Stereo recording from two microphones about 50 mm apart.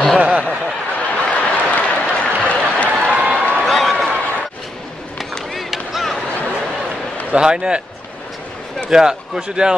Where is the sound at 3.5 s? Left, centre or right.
Centre.